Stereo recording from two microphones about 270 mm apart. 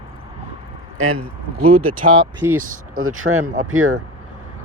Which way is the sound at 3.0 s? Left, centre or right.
Right.